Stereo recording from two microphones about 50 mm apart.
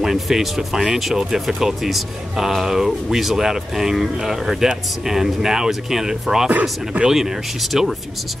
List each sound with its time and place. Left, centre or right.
0.0 s speech: centre
7.2 s speech: centre